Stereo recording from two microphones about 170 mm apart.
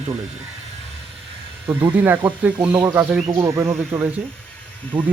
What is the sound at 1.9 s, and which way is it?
Speech, 10° right (ahead or behind).